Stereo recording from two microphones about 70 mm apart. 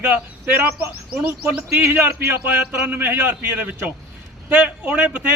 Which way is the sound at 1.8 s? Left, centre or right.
Right.